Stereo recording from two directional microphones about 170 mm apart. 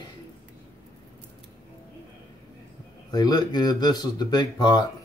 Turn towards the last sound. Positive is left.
turn(degrees=25)  # may be behind; listen again after turning